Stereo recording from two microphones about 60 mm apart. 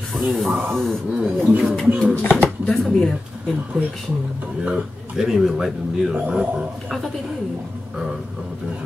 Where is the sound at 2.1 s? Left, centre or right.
Left.